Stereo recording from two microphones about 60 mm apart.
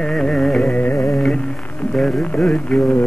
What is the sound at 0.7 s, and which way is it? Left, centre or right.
Carnatic music, left.